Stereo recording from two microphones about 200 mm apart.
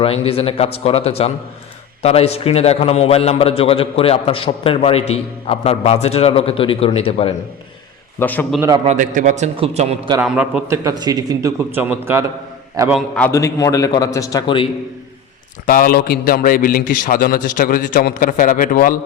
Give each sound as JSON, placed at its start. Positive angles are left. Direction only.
{"t": 0.0, "sound": "a man's voice", "side_deg": 30}
{"t": 8.2, "sound": "a man's voice", "side_deg": 10}
{"t": 8.8, "sound": "a man's voice", "side_deg": -35}
{"t": 10.2, "sound": "a man's voice", "side_deg": -5}
{"t": 13.1, "sound": "a man's voice", "side_deg": 10}
{"t": 15.6, "sound": "a man's voice", "side_deg": 45}